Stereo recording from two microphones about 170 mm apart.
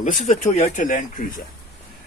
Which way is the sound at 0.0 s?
45° left (ahead or behind).